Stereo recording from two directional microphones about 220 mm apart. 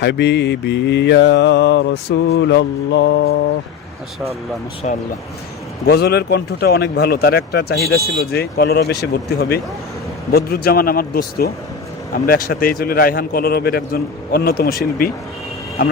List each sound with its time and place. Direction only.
0.0 s mantra: 50° left (ahead or behind)
4.8 s speech: 35° left (ahead or behind)
5.8 s mantra: 45° left (ahead or behind)
10.3 s mantra: 45° left (ahead or behind)